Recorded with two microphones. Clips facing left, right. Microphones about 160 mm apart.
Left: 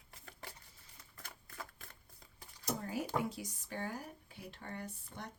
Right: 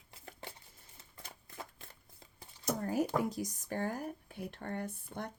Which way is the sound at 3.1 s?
40° right (ahead or behind).